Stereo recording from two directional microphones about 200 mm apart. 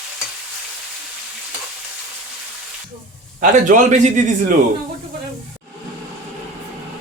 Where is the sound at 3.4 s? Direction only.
40° right (ahead or behind).